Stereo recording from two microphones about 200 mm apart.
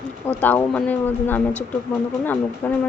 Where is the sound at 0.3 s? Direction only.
10° left (ahead or behind).